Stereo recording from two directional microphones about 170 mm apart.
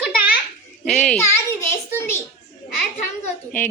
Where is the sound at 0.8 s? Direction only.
Centre (ahead or behind).